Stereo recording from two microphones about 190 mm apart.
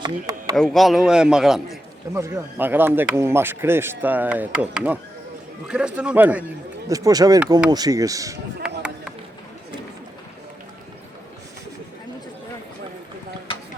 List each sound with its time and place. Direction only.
0.0 s speech: 20° right (ahead or behind)
0.5 s a man's voice: centre (ahead or behind)
2.1 s a man's voice: 15° right (ahead or behind)